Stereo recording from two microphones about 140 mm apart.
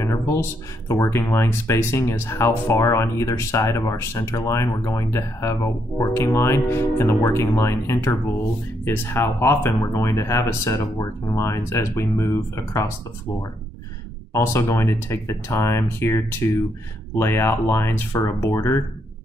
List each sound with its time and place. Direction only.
0.0 s speech: 20° left (ahead or behind)
14.3 s speech: 20° left (ahead or behind)